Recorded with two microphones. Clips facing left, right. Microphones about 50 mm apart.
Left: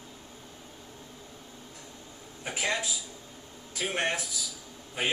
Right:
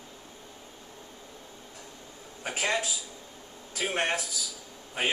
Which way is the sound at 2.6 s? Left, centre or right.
Right.